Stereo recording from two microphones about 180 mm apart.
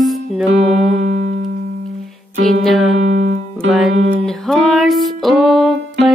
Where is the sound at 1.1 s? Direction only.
55° right (ahead or behind).